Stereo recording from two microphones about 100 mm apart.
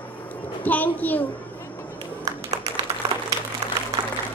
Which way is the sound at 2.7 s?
40° right (ahead or behind).